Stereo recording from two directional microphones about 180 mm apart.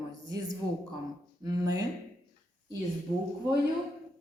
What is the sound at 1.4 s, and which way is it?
Speech, 20° right (ahead or behind).